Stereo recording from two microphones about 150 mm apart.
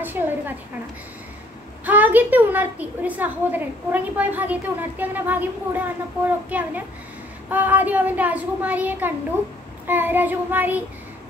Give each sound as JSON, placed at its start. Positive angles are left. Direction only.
{"t": 0.0, "sound": "a woman's voice", "side_deg": -15}
{"t": 1.9, "sound": "a woman's voice", "side_deg": -10}